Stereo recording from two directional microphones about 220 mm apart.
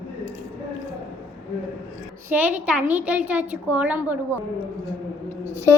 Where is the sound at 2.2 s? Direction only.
5° right (ahead or behind).